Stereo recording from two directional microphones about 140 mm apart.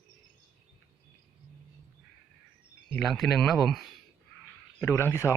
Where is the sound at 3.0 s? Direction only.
Centre (ahead or behind).